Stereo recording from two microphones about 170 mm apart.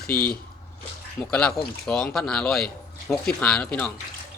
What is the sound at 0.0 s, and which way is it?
Speech, 60° left (ahead or behind).